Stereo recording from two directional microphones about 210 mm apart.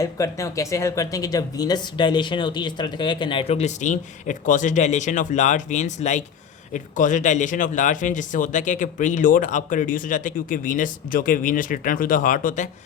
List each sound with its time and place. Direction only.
0.0 s speech: 15° left (ahead or behind); by 12.6 s 40° left (ahead or behind)